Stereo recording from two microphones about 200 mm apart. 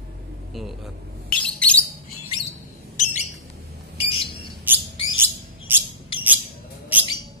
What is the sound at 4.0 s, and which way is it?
Bird, 25° left (ahead or behind).